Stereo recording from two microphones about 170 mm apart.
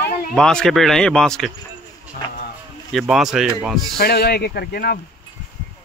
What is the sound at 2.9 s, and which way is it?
Speech, centre (ahead or behind).